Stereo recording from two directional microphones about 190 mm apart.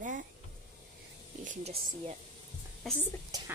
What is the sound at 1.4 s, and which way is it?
Speech, 40° right (ahead or behind).